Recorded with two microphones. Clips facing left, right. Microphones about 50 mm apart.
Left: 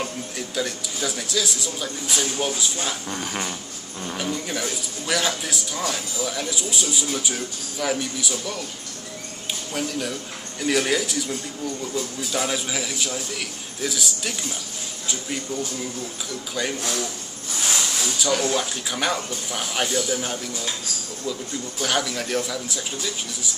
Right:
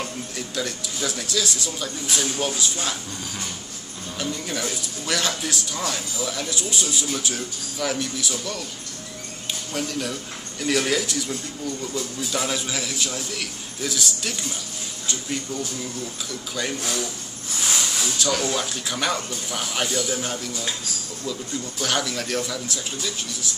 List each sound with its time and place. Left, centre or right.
0.6 s speech: centre
3.1 s dog: left
4.5 s speech: centre
9.8 s speech: centre